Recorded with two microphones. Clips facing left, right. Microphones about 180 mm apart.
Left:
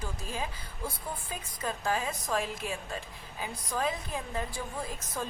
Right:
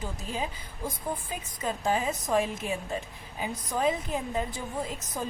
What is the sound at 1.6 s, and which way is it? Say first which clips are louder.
A woman's voice: right 4 dB; 20° right (ahead or behind).